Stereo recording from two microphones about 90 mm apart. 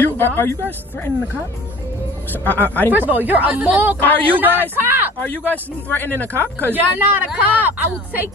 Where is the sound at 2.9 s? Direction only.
20° right (ahead or behind).